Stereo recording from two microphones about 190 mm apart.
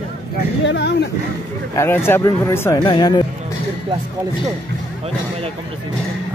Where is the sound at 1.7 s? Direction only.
15° left (ahead or behind).